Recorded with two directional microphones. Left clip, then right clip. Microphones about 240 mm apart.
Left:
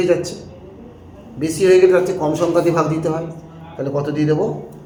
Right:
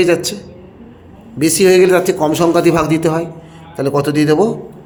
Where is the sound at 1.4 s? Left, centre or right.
Right.